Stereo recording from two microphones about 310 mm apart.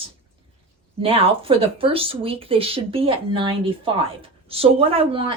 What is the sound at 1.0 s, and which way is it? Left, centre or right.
Speech, centre.